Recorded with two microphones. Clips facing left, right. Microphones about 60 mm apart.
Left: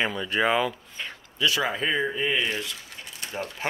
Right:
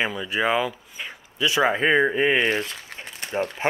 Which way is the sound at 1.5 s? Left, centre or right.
Right.